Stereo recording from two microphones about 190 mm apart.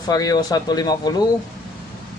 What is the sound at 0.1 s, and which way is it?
Speech, 20° left (ahead or behind).